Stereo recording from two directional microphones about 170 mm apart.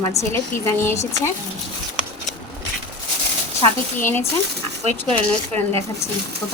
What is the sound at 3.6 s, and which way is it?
Speech, 15° left (ahead or behind).